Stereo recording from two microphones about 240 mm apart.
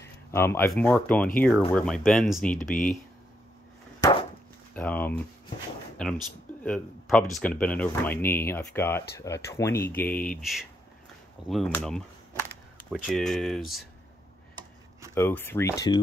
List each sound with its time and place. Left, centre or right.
0.0 s speech: centre
4.0 s chop: left
4.7 s speech: centre
11.4 s speech: centre
15.1 s speech: centre